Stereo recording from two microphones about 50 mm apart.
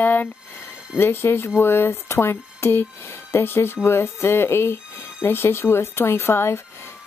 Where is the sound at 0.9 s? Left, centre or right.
Left.